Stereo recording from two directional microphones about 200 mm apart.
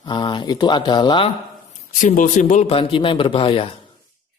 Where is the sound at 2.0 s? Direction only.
40° left (ahead or behind).